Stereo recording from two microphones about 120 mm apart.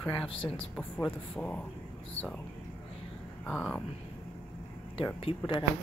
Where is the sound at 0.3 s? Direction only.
50° left (ahead or behind).